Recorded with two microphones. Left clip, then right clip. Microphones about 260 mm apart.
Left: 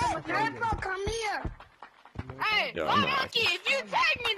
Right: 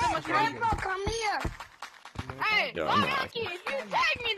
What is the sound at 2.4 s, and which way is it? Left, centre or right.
A woman's voice, centre.